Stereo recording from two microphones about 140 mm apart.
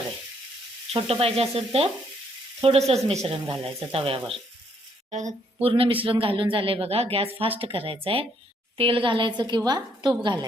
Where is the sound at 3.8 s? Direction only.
40° right (ahead or behind).